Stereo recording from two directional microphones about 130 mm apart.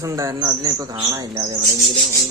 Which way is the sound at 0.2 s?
25° right (ahead or behind).